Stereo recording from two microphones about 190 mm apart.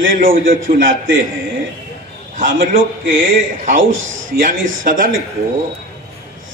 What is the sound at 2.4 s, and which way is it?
A man's voice, 50° right (ahead or behind).